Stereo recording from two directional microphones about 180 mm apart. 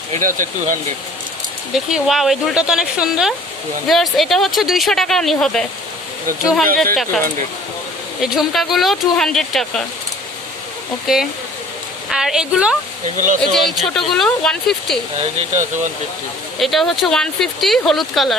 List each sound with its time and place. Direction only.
0.1 s speech: 45° right (ahead or behind)
1.7 s speech: centre (ahead or behind)
8.2 s speech: centre (ahead or behind)
11.0 s speech: centre (ahead or behind)
13.1 s speech: 45° right (ahead or behind)
13.4 s speech: centre (ahead or behind)
15.2 s speech: 40° right (ahead or behind)
16.6 s speech: centre (ahead or behind)